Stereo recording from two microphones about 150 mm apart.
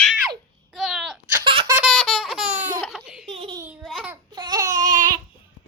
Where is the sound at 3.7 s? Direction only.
5° right (ahead or behind).